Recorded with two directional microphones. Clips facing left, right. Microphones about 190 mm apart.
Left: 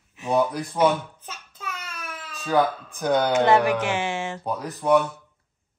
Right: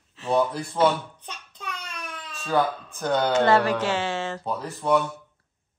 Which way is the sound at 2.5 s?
15° left (ahead or behind).